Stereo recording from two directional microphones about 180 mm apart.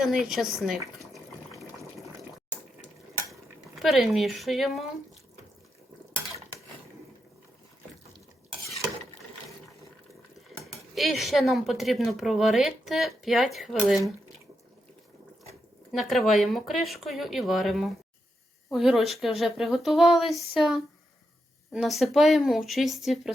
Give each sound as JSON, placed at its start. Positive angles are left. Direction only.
{"t": 0.0, "sound": "a woman's voice", "side_deg": 0}
{"t": 0.9, "sound": "water", "side_deg": 0}
{"t": 3.8, "sound": "a woman's voice", "side_deg": 0}
{"t": 10.7, "sound": "a woman's voice", "side_deg": 0}
{"t": 15.9, "sound": "a woman's voice", "side_deg": 0}